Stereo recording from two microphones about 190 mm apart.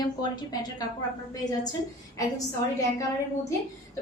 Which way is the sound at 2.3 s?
20° left (ahead or behind).